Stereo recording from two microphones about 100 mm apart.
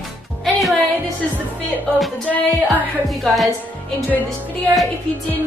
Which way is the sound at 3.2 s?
Centre (ahead or behind).